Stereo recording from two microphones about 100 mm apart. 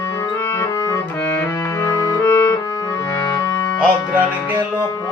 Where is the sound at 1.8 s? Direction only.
40° left (ahead or behind).